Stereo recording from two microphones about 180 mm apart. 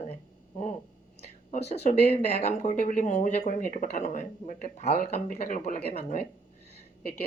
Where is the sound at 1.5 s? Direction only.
35° left (ahead or behind).